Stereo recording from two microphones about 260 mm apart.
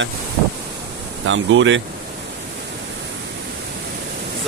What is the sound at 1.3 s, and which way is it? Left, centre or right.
Speech, right.